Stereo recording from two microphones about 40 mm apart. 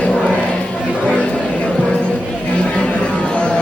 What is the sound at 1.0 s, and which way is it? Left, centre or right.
Chatter, centre.